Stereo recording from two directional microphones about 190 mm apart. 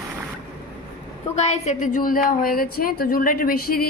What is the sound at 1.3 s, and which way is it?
A woman's voice, 35° left (ahead or behind).